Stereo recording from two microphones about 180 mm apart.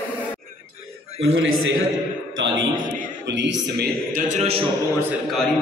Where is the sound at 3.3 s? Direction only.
80° right.